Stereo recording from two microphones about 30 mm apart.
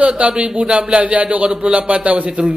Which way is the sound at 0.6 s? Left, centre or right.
Right.